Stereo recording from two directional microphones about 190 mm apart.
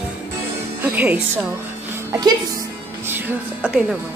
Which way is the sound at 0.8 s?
10° right (ahead or behind).